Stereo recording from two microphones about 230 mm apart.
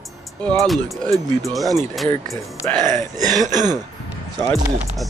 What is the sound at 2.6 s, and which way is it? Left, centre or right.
Speech, centre.